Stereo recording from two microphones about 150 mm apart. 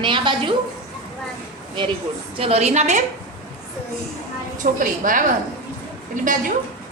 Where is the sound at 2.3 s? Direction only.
40° right (ahead or behind).